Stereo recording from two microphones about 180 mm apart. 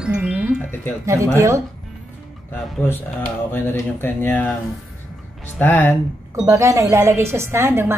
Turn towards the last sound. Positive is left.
turn(degrees=-15)  # may be behind; listen again after turning